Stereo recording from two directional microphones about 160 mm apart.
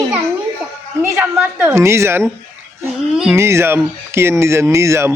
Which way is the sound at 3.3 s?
15° right (ahead or behind).